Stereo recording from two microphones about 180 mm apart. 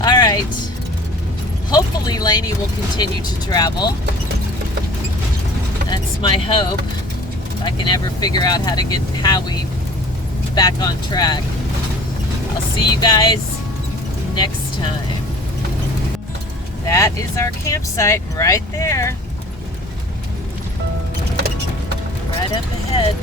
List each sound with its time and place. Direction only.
0.0 s vehicle: 25° left (ahead or behind)
1.7 s speech: 20° left (ahead or behind)
5.9 s speech: 30° left (ahead or behind)
13.0 s speech: 25° left (ahead or behind)
16.8 s speech: 15° left (ahead or behind)
22.5 s speech: 30° left (ahead or behind)